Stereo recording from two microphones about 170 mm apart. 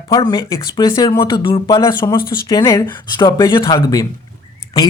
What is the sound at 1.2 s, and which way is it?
Speech, 30° left (ahead or behind).